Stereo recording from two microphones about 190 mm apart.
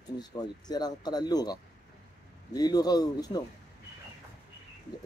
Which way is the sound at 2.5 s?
20° left (ahead or behind).